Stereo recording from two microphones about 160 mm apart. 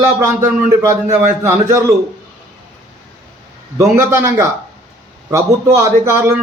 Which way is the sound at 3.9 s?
15° right (ahead or behind).